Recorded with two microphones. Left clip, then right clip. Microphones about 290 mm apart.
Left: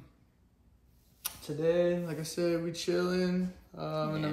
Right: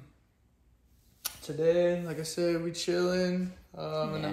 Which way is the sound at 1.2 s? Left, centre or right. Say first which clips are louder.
Right 3 dB; centre.